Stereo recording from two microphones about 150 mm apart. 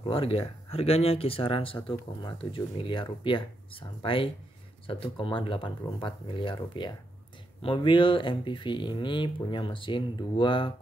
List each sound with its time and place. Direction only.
0.0 s speech: 40° left (ahead or behind)